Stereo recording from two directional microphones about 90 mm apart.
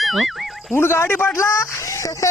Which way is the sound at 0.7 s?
30° left (ahead or behind).